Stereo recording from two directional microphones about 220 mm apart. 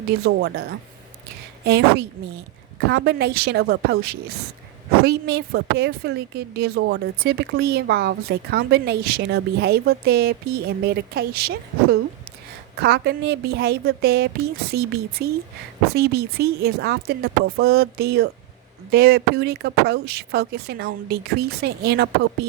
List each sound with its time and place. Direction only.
1.6 s a woman's voice: 45° right (ahead or behind)